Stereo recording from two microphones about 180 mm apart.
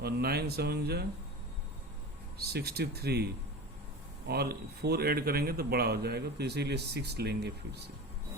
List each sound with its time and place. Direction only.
0.0 s a man's voice: 60° right (ahead or behind)
2.4 s a man's voice: 60° right (ahead or behind)
4.3 s a man's voice: 60° right (ahead or behind)